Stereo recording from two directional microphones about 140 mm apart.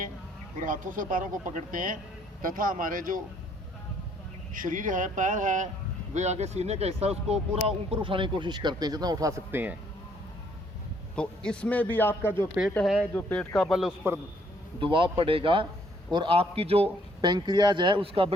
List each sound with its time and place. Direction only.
0.6 s speech: 70° right (ahead or behind)
4.5 s speech: 70° right (ahead or behind)
6.1 s speech: 55° right (ahead or behind); by 9.7 s 15° right (ahead or behind)
11.1 s a man's voice: 5° left (ahead or behind)
12.8 s a man's voice: centre (ahead or behind)
13.1 s a man's voice: 10° left (ahead or behind)
13.6 s a man's voice: centre (ahead or behind)
14.8 s a man's voice: 35° right (ahead or behind)
17.2 s speech: 30° right (ahead or behind)